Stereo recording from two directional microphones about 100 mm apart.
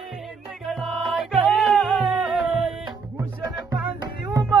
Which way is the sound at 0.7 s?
Centre (ahead or behind).